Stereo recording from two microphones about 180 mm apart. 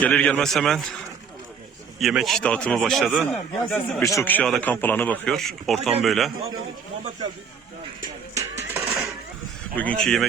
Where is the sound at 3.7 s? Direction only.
15° left (ahead or behind); by 6.3 s centre (ahead or behind).